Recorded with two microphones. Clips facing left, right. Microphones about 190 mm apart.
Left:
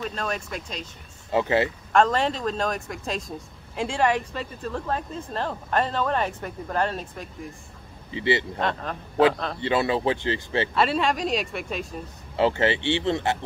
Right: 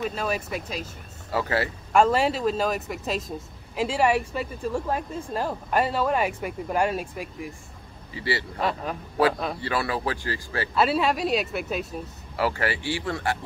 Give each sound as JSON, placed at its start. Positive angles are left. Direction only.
{"t": 0.0, "sound": "speech", "side_deg": -5}
{"t": 1.3, "sound": "speech", "side_deg": 20}
{"t": 1.9, "sound": "a man's voice", "side_deg": -10}
{"t": 8.1, "sound": "speech", "side_deg": 20}
{"t": 8.5, "sound": "speech", "side_deg": -5}
{"t": 9.6, "sound": "speech", "side_deg": 20}
{"t": 10.7, "sound": "speech", "side_deg": -5}
{"t": 12.4, "sound": "speech", "side_deg": 25}